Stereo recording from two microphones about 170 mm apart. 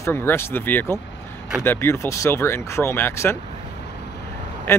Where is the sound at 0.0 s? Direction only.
15° left (ahead or behind).